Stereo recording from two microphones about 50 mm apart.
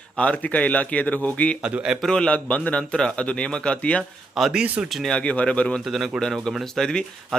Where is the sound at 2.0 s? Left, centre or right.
Centre.